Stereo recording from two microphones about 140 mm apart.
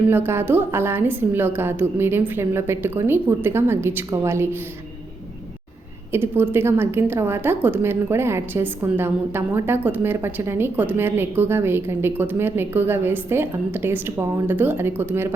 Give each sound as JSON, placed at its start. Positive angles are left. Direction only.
{"t": 0.1, "sound": "a woman's voice", "side_deg": -15}
{"t": 6.1, "sound": "a woman's voice", "side_deg": -15}